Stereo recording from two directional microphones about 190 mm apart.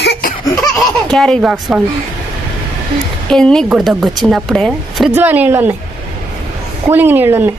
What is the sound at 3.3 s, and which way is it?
A woman's voice, 5° left (ahead or behind).